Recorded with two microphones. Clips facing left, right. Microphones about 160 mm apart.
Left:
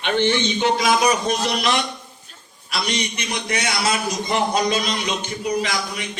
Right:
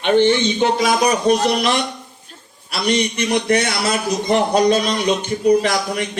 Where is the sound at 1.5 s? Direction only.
45° right (ahead or behind).